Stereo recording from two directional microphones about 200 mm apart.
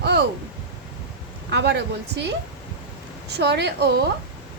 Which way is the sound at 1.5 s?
60° right (ahead or behind).